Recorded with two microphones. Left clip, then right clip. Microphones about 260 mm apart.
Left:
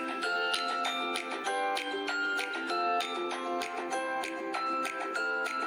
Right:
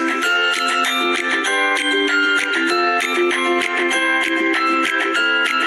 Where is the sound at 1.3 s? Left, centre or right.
Right.